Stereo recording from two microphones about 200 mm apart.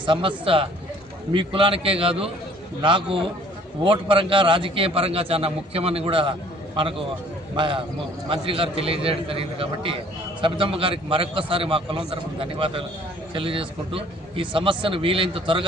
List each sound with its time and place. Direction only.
0.0 s a man's voice: 25° right (ahead or behind)